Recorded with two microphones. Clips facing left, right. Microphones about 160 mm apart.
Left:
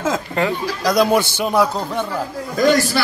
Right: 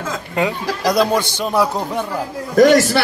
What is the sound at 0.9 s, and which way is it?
Speech, 10° left (ahead or behind).